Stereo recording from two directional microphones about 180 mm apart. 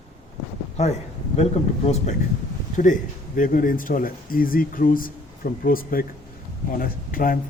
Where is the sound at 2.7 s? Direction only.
45° left (ahead or behind).